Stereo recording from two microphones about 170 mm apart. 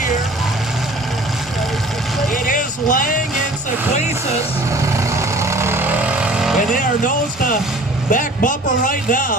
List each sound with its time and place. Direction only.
2.3 s vehicle: 50° left (ahead or behind)
4.8 s vehicle: 15° right (ahead or behind)
6.6 s speech: 50° left (ahead or behind)
8.1 s a man's voice: 50° left (ahead or behind)